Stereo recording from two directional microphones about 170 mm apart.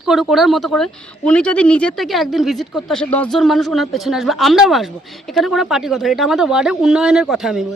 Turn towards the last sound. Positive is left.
turn(degrees=0)  # may be behind; listen again after turning